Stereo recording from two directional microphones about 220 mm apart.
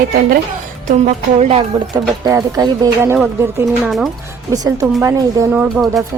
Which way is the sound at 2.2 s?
15° right (ahead or behind).